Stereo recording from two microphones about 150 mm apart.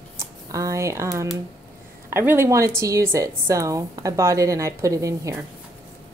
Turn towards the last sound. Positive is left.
turn(degrees=-20)  # may be behind; listen again after turning